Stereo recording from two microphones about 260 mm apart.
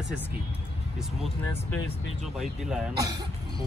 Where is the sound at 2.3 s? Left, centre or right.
Centre.